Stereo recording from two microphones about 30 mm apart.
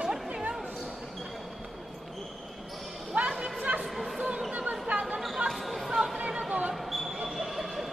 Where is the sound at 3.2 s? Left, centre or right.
Right.